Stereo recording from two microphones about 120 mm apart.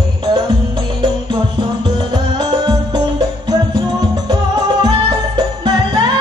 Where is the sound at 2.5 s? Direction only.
40° right (ahead or behind).